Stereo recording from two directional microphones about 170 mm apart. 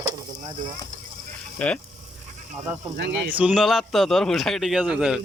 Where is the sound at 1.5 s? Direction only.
5° left (ahead or behind).